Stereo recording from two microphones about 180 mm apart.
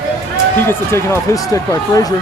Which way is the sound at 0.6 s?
15° left (ahead or behind).